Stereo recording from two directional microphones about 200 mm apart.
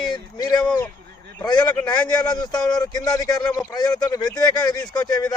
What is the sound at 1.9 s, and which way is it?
Speech, 20° left (ahead or behind).